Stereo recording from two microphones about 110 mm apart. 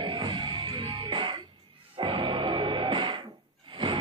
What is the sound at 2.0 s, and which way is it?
Music, 50° right (ahead or behind).